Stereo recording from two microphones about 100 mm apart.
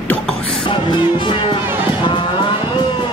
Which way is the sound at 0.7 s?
55° left (ahead or behind).